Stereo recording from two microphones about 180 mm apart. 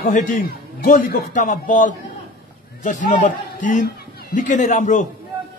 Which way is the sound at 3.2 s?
45° left (ahead or behind).